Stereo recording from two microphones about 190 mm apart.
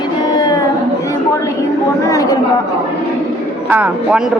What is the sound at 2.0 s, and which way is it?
Speech, 15° left (ahead or behind).